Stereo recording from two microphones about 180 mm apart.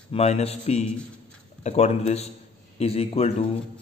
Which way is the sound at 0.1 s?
35° left (ahead or behind).